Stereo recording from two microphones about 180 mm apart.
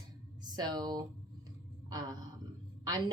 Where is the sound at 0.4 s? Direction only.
25° right (ahead or behind).